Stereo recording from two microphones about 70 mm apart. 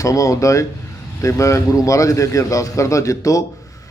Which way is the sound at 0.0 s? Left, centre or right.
Left.